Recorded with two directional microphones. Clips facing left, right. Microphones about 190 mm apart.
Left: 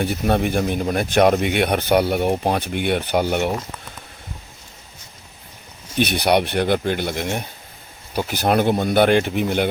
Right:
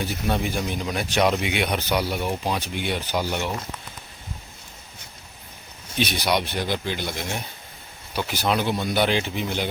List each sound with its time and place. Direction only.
0.0 s speech: 60° left (ahead or behind)
6.0 s speech: 60° left (ahead or behind)